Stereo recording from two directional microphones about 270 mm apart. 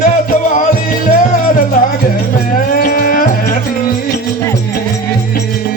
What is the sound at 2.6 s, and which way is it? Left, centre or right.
Music, left.